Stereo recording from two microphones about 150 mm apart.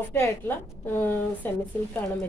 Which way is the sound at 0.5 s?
15° left (ahead or behind).